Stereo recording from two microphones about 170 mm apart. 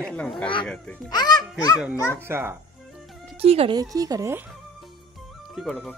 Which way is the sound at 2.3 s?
15° right (ahead or behind).